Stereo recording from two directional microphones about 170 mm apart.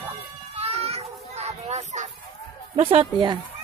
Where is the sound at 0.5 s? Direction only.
35° right (ahead or behind).